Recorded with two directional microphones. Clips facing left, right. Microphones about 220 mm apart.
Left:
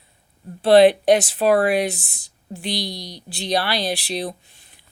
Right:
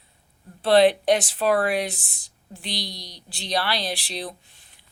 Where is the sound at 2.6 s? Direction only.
50° left (ahead or behind).